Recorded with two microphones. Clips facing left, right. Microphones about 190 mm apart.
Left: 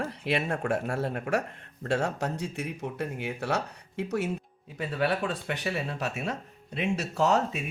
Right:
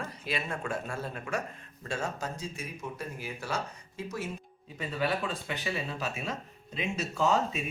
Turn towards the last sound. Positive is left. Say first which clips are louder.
# left 2 dB
turn(degrees=70)  # may be behind; listen again after turning